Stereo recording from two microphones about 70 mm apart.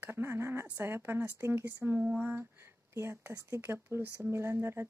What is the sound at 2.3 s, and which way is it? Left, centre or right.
Speech, right.